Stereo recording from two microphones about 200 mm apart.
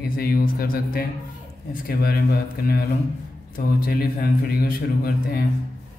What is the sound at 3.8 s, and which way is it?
Mantra, 50° left (ahead or behind).